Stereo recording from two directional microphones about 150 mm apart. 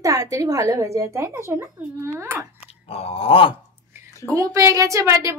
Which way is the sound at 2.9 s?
40° left (ahead or behind).